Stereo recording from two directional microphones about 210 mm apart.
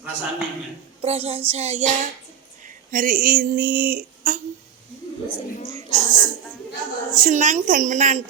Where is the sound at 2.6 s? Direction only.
40° right (ahead or behind).